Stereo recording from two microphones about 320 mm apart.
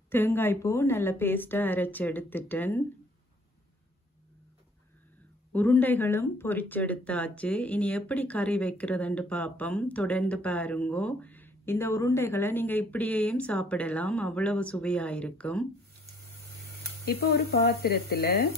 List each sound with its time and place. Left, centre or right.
0.1 s a woman's voice: centre
5.5 s speech: centre
17.0 s speech: left